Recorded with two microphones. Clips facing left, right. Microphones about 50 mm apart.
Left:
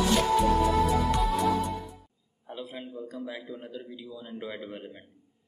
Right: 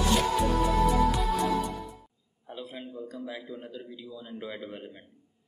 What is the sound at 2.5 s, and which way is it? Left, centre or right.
A man's voice, centre.